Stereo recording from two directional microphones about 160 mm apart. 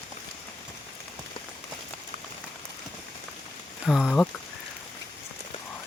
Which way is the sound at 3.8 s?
Centre (ahead or behind).